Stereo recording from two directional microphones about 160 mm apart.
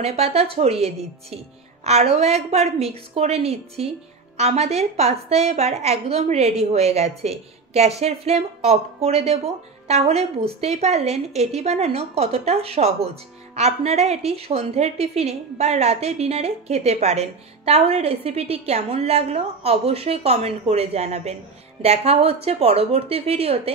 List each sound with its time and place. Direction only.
0.0 s speech: 40° right (ahead or behind)